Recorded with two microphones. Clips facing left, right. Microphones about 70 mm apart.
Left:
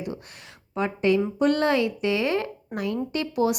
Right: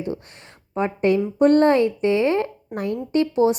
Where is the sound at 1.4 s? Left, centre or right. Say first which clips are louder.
Right 6 dB; right.